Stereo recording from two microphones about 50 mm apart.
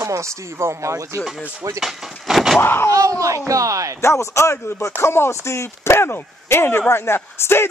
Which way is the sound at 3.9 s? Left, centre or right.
Left.